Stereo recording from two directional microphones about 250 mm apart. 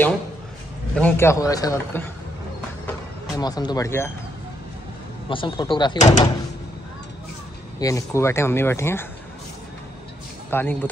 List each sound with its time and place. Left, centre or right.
0.9 s speech: centre
3.3 s speech: centre
5.3 s speech: centre
7.8 s speech: centre
10.5 s speech: centre